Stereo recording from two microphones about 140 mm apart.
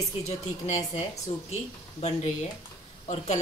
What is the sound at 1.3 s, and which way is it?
Speech, 50° left (ahead or behind).